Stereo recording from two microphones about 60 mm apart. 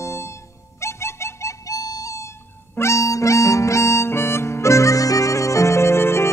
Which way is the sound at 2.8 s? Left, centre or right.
Left.